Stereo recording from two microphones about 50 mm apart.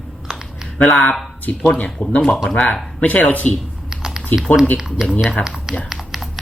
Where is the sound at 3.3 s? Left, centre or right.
Left.